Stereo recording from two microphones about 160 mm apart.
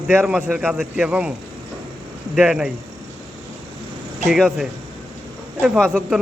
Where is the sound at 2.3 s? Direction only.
5° right (ahead or behind).